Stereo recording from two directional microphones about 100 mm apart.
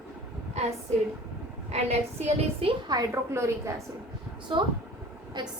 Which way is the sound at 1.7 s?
90° right.